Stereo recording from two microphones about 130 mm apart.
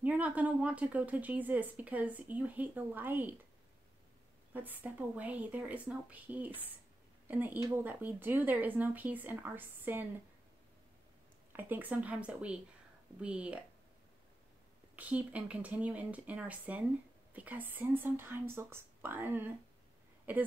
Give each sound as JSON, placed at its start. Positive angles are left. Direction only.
{"t": 0.0, "sound": "speech", "side_deg": -10}
{"t": 4.6, "sound": "speech", "side_deg": -15}
{"t": 11.5, "sound": "speech", "side_deg": -15}
{"t": 15.0, "sound": "speech", "side_deg": -10}